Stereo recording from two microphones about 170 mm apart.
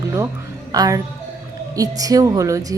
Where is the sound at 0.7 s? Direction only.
20° right (ahead or behind).